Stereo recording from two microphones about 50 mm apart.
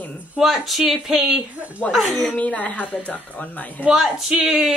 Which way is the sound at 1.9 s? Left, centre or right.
Centre.